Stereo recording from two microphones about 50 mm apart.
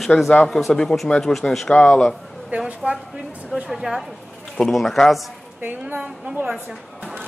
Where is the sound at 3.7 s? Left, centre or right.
Centre.